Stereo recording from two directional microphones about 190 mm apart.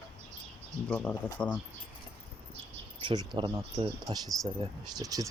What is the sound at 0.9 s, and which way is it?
Speech, 5° left (ahead or behind).